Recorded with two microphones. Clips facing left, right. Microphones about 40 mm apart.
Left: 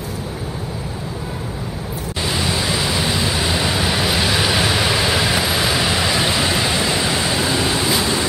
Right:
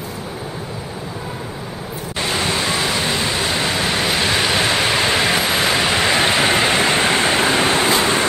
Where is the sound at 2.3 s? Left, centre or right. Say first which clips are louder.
Right 1 dB; centre.